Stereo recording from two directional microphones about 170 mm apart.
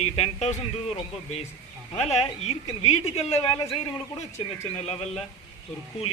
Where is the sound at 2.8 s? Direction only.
35° left (ahead or behind).